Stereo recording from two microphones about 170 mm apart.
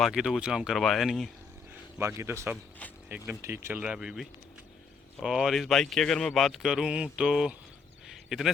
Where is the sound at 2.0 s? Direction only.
15° right (ahead or behind).